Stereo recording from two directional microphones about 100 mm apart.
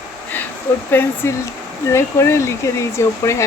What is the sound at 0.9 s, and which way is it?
Speech, 20° left (ahead or behind).